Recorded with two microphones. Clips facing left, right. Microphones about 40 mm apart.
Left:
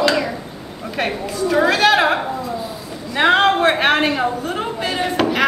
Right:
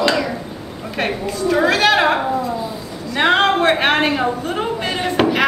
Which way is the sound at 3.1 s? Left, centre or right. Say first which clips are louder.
Left 1 dB; centre.